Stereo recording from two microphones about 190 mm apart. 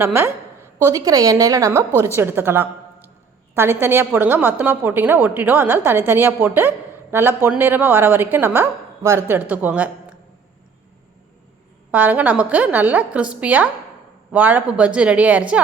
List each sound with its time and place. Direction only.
0.0 s a woman's voice: 10° right (ahead or behind)
11.9 s a woman's voice: 10° right (ahead or behind)